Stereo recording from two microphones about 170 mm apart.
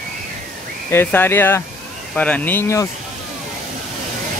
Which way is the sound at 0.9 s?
15° left (ahead or behind).